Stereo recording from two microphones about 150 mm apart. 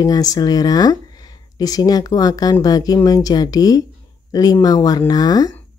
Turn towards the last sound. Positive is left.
turn(degrees=25)  # may be behind; listen again after turning